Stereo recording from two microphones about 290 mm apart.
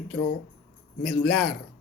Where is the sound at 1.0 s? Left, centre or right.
Centre.